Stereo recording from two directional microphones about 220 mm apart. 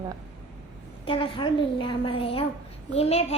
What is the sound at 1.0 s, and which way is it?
A woman's voice, 25° left (ahead or behind).